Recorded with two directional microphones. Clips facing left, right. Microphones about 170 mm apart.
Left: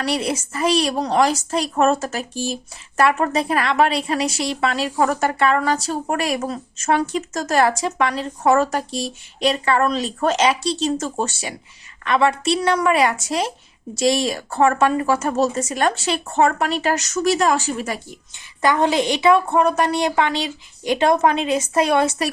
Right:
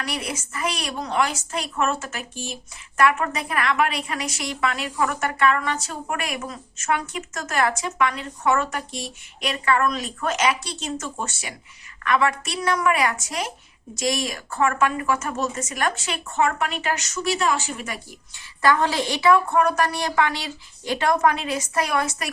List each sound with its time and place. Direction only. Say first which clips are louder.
0.0 s a woman's voice: left 8 dB; 30° left (ahead or behind)
18.6 s a woman's voice: left 3 dB; 20° left (ahead or behind)